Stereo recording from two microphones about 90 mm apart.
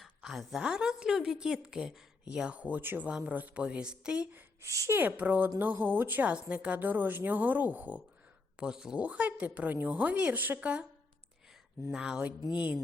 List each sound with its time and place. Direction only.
0.0 s a woman's voice: centre (ahead or behind)
4.3 s speech: 20° right (ahead or behind)
4.7 s speech: 35° right (ahead or behind)
4.9 s a woman's voice: 20° right (ahead or behind)
8.5 s a woman's voice: 5° right (ahead or behind)
11.9 s a woman's voice: 5° right (ahead or behind)